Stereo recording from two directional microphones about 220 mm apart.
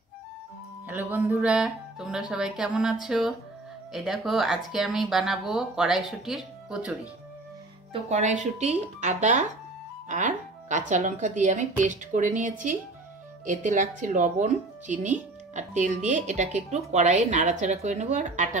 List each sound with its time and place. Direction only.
0.8 s speech: 10° right (ahead or behind)
7.9 s speech: 30° right (ahead or behind)